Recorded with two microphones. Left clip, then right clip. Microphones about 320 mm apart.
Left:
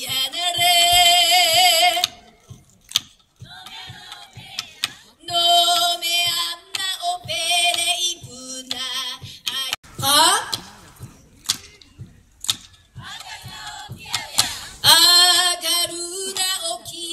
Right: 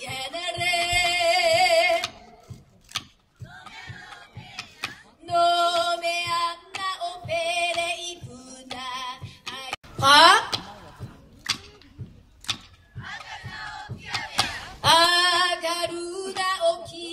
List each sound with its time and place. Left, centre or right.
0.1 s music: centre
4.8 s female singing: centre
14.3 s child singing: centre